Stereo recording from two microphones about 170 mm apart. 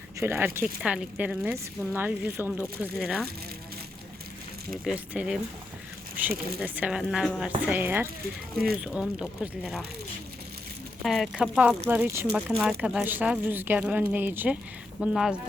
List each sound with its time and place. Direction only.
0.2 s speech: 15° right (ahead or behind)
4.7 s speech: 5° right (ahead or behind)
8.5 s speech: 60° right (ahead or behind)
8.8 s speech: 5° right (ahead or behind)
11.0 s speech: centre (ahead or behind)